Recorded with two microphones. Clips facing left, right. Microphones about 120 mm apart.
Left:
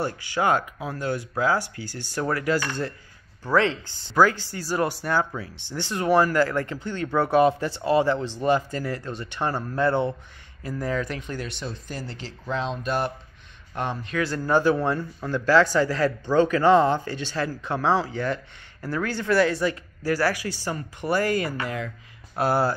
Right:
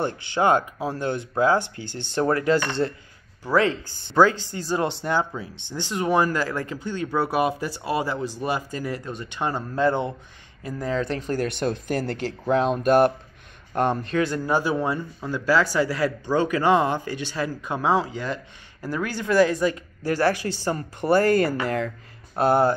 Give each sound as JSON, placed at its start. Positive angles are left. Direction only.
{"t": 0.0, "sound": "speech", "side_deg": -25}
{"t": 4.1, "sound": "speech", "side_deg": -25}
{"t": 14.1, "sound": "speech", "side_deg": -20}
{"t": 22.3, "sound": "speech", "side_deg": -25}